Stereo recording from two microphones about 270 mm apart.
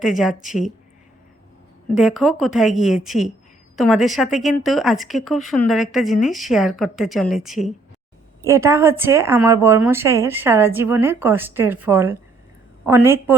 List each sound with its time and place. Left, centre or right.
0.0 s a woman's voice: centre
0.4 s speech: left
2.0 s a woman's voice: centre